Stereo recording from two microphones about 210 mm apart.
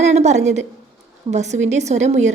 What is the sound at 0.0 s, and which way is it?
A woman's voice, 30° right (ahead or behind).